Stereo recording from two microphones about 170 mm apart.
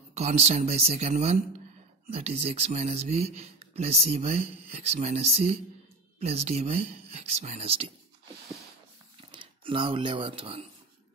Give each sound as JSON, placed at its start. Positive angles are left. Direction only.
{"t": 0.1, "sound": "speech", "side_deg": -40}
{"t": 9.3, "sound": "speech", "side_deg": -30}